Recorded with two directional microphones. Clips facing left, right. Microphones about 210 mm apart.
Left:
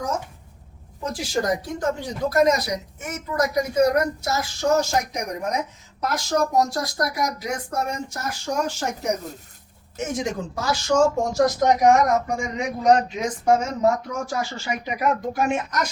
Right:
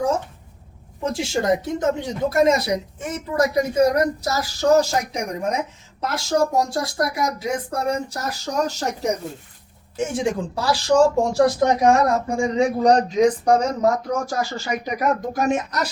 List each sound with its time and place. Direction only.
1.0 s speech: 25° right (ahead or behind)
10.1 s speech: 30° right (ahead or behind)